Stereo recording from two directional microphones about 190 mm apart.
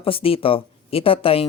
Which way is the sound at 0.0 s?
30° left (ahead or behind).